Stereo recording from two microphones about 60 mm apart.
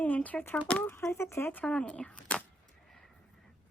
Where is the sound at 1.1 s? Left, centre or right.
Left.